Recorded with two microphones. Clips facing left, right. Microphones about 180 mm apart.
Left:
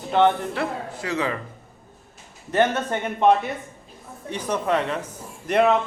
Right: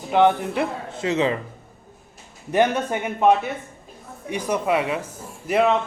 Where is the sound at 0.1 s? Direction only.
10° right (ahead or behind).